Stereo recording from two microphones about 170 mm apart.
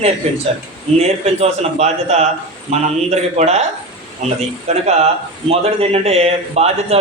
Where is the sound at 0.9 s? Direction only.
40° right (ahead or behind).